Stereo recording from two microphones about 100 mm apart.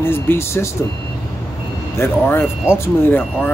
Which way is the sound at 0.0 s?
25° left (ahead or behind).